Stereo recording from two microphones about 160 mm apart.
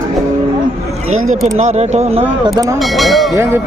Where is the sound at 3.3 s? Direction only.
15° right (ahead or behind).